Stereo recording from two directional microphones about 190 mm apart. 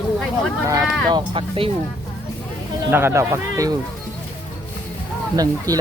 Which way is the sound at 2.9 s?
10° right (ahead or behind).